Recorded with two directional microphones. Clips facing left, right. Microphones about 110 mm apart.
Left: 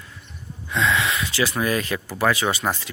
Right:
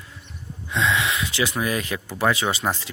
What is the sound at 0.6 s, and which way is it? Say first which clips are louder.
Speech: left 1 dB; 20° right (ahead or behind).